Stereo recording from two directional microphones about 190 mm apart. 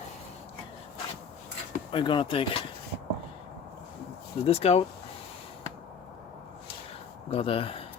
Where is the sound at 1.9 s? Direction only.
25° left (ahead or behind).